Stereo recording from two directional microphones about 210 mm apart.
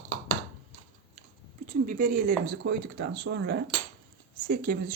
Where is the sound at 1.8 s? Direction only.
40° right (ahead or behind).